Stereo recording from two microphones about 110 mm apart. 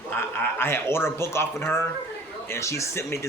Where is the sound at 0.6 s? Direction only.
20° left (ahead or behind).